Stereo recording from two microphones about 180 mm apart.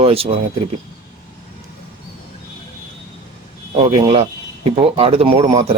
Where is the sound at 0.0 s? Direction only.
30° right (ahead or behind).